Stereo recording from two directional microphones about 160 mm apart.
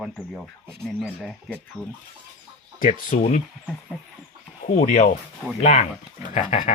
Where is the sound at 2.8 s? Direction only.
55° left (ahead or behind).